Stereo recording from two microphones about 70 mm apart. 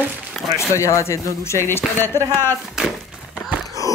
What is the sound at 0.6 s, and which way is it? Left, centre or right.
Speech, left.